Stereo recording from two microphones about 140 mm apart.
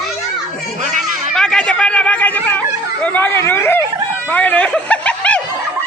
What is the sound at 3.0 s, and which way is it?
Speech, 15° left (ahead or behind).